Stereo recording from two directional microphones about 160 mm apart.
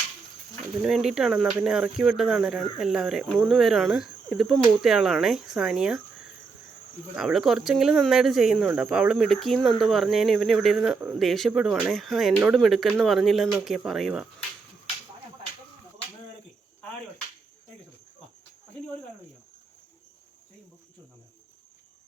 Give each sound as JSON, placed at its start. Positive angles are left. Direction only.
{"t": 0.8, "sound": "speech", "side_deg": 0}
{"t": 7.2, "sound": "speech", "side_deg": 0}